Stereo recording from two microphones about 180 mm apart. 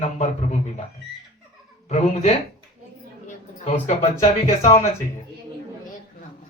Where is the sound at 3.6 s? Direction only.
40° left (ahead or behind).